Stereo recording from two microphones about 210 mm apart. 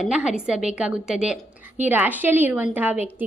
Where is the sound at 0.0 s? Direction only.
5° right (ahead or behind).